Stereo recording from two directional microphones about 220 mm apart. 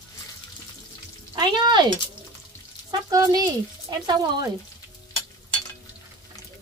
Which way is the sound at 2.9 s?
15° right (ahead or behind).